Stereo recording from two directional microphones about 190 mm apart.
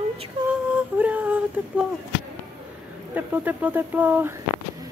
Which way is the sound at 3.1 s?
10° right (ahead or behind).